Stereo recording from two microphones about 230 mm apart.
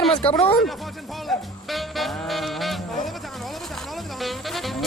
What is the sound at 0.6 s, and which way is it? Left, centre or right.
Music, centre.